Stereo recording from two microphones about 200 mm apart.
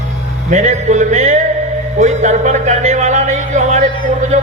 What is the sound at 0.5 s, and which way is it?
Speech, 35° right (ahead or behind).